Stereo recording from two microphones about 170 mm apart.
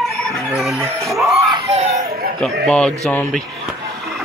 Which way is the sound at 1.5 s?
40° right (ahead or behind).